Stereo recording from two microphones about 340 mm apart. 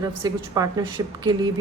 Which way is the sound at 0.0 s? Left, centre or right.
Centre.